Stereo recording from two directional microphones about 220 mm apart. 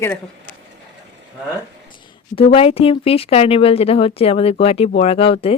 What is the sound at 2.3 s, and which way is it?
Speech, 25° left (ahead or behind).